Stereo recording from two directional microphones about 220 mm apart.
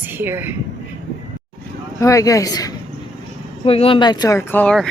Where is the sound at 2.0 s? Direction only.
15° left (ahead or behind).